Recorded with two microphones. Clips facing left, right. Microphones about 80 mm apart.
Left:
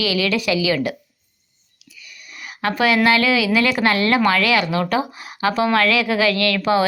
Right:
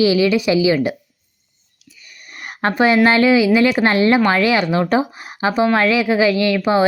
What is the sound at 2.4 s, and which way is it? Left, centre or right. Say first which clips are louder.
A woman's voice: right 3 dB; right.